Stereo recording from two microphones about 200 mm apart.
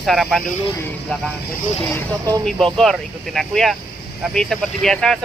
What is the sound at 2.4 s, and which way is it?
Speech, centre (ahead or behind).